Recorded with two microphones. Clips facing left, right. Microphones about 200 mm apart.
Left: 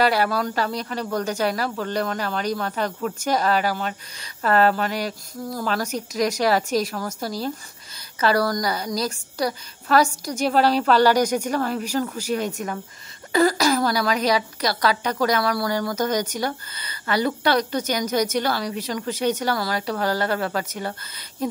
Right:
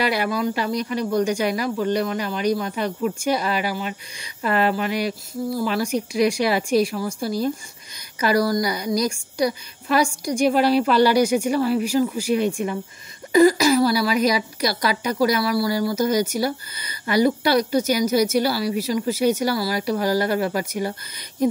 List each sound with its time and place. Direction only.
0.3 s a woman's voice: 10° right (ahead or behind)
4.5 s speech: 40° left (ahead or behind)
5.6 s a woman's voice: 10° right (ahead or behind)